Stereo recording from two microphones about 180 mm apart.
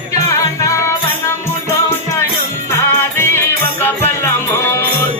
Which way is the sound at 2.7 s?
15° left (ahead or behind).